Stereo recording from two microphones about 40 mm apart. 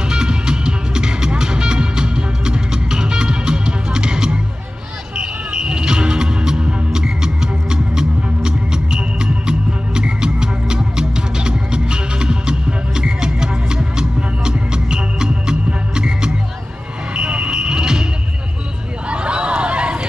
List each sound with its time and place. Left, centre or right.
0.1 s music: centre
17.1 s smoke detector: right
19.0 s a sound: right